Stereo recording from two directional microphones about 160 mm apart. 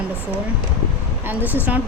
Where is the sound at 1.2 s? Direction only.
10° right (ahead or behind).